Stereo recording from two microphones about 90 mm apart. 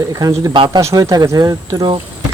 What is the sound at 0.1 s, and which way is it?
Speech, 40° right (ahead or behind).